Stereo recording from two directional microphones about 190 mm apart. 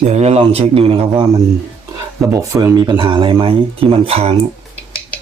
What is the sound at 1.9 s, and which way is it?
Speech, 15° right (ahead or behind).